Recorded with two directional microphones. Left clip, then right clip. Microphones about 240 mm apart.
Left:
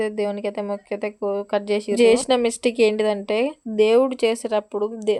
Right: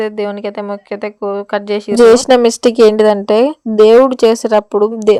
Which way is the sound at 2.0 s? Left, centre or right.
Right.